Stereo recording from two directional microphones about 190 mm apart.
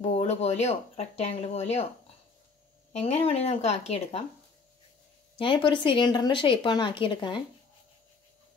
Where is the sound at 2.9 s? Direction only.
35° left (ahead or behind).